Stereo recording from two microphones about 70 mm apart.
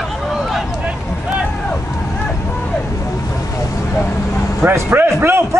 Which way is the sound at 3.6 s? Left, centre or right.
Left.